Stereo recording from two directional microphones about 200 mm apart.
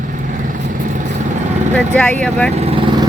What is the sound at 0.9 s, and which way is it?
Vehicle, 35° right (ahead or behind).